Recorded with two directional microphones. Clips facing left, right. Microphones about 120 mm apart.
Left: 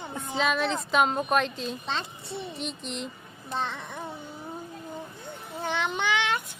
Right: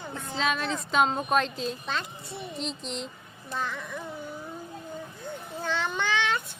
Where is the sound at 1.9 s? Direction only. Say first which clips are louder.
Left 1 dB; 30° left (ahead or behind).